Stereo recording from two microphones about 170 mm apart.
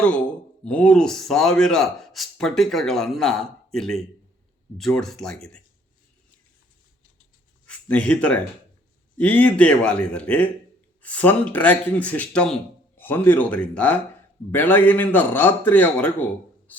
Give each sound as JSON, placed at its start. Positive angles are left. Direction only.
{"t": 0.6, "sound": "speech", "side_deg": 5}
{"t": 7.7, "sound": "a man's voice", "side_deg": 5}